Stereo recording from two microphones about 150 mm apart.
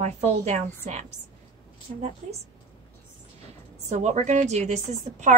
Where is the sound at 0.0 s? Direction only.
50° right (ahead or behind).